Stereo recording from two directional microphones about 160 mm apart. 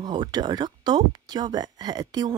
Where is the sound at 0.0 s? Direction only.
25° right (ahead or behind).